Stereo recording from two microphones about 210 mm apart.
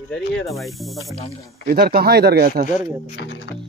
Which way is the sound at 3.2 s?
60° left (ahead or behind).